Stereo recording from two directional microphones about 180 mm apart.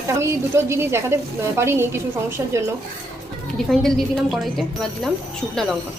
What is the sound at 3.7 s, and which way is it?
A woman's voice, centre (ahead or behind).